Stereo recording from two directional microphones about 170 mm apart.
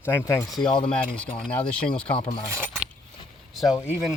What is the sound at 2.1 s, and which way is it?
Speech, 35° left (ahead or behind).